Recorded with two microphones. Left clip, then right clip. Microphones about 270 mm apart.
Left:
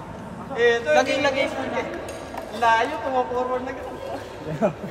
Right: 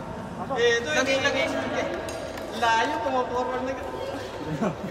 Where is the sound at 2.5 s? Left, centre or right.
Left.